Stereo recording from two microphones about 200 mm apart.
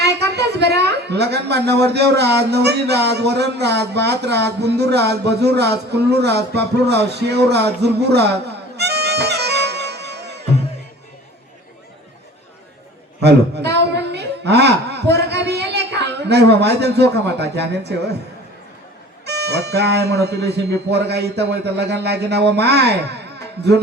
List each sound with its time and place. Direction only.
0.0 s a woman's voice: 55° right (ahead or behind)
13.2 s a woman's voice: 55° right (ahead or behind)
19.2 s a man's voice: 55° right (ahead or behind)